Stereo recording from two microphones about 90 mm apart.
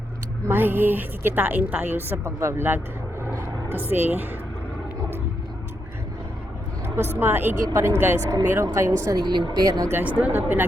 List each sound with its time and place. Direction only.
0.4 s a woman's voice: 25° right (ahead or behind)
6.8 s vehicle: 25° right (ahead or behind)
7.2 s a woman's voice: 25° right (ahead or behind)
9.0 s speech: 50° right (ahead or behind)
9.9 s a woman's voice: 15° right (ahead or behind)